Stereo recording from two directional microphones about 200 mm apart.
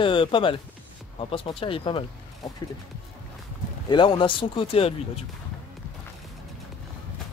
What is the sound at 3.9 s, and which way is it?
Speech, 25° left (ahead or behind).